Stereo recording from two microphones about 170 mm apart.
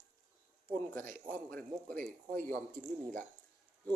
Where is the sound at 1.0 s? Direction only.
55° right (ahead or behind).